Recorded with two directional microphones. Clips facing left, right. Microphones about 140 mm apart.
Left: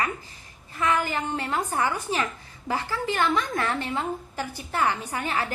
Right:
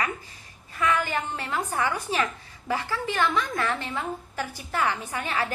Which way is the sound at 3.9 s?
30° left (ahead or behind).